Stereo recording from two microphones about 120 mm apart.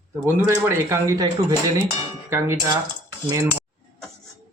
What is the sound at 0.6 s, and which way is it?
Speech, 25° right (ahead or behind).